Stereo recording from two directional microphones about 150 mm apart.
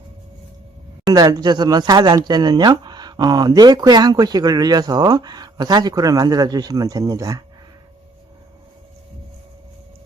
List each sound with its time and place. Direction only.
1.1 s speech: 25° right (ahead or behind)